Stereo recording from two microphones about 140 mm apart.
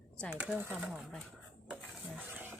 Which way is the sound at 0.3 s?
10° right (ahead or behind).